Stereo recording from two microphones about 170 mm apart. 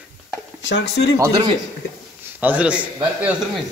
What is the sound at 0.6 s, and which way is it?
Speech, 90° left.